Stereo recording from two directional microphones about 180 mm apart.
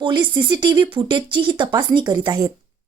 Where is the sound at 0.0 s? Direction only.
25° right (ahead or behind).